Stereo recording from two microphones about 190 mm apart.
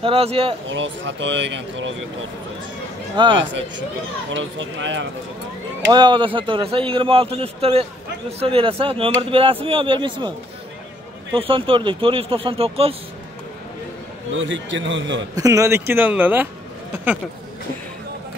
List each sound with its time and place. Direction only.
0.0 s speech: 30° right (ahead or behind)
0.7 s speech: 75° right (ahead or behind)
3.2 s speech: 25° right (ahead or behind)
4.3 s speech: 85° right
5.9 s speech: 25° right (ahead or behind)
11.3 s speech: 30° right (ahead or behind)
14.3 s speech: 80° right
15.3 s speech: 15° right (ahead or behind)